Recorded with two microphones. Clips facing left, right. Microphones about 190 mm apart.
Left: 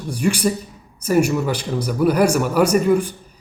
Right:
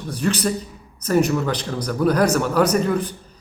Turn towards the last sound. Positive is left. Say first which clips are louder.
# left 3 dB
turn(degrees=10)  # may be behind; listen again after turning